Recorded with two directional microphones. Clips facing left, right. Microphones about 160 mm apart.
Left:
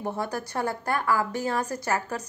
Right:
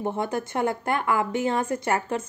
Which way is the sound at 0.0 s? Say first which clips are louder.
Right 3 dB; 20° right (ahead or behind).